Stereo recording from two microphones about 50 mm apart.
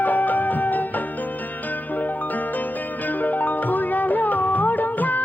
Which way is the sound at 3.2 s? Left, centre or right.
Left.